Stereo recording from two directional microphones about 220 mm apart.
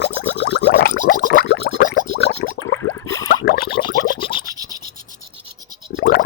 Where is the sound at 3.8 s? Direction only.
20° left (ahead or behind).